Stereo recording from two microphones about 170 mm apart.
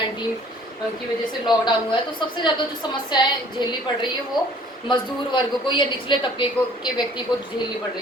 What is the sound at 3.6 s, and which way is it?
A woman's voice, 25° left (ahead or behind).